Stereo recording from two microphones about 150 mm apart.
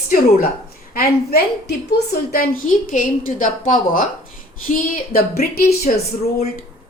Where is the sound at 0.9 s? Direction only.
90° left.